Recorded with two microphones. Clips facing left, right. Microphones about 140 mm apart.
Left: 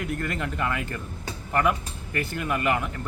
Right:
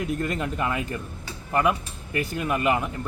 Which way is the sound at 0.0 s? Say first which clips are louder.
Right 3 dB; 20° right (ahead or behind).